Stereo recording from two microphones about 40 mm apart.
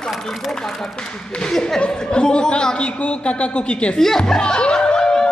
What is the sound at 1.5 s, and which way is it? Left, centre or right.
Speech, centre.